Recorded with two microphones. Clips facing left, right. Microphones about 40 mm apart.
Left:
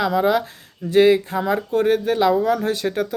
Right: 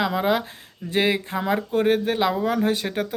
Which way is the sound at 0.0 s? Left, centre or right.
Right.